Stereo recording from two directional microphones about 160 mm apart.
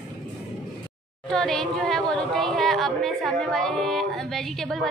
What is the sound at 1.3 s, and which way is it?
A woman's voice, 5° left (ahead or behind).